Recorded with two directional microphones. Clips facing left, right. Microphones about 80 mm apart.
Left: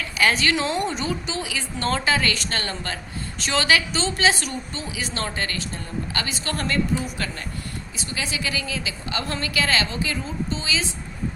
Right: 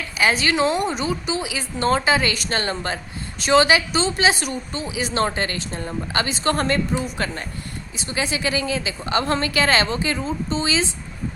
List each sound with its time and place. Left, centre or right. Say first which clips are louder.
0.1 s a woman's voice: right 1 dB; centre; by 10.8 s right